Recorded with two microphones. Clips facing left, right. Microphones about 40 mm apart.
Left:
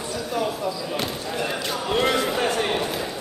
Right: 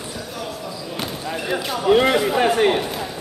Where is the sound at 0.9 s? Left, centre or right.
Centre.